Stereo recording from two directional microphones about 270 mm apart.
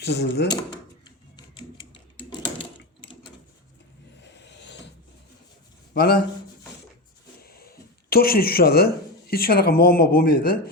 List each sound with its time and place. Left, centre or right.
0.0 s speech: left
2.4 s a sound: left
4.2 s vehicle: left
5.9 s a man's voice: left
7.4 s speech: left